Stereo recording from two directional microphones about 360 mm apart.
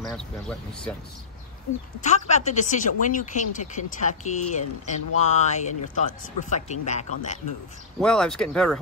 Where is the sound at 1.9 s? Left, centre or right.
Centre.